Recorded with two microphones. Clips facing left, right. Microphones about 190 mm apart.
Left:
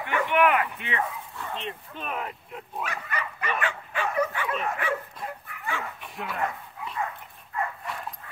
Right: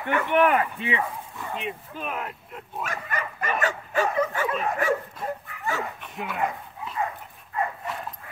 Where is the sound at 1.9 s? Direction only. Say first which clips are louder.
Right 1 dB; centre (ahead or behind).